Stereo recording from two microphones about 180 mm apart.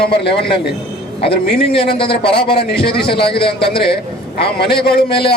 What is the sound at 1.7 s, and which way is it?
Speech, 30° left (ahead or behind).